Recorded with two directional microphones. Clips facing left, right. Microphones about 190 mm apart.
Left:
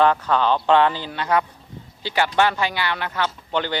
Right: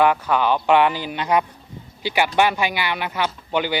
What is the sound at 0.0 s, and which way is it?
Speech, 10° right (ahead or behind).